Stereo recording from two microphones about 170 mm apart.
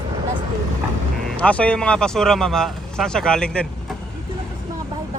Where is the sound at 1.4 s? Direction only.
5° left (ahead or behind).